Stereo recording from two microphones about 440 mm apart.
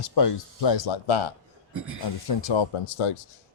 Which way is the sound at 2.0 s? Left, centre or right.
Left.